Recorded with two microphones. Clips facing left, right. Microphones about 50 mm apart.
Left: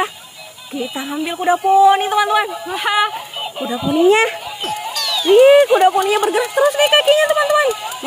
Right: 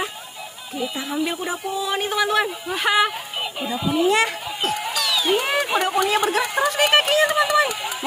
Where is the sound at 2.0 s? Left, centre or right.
Centre.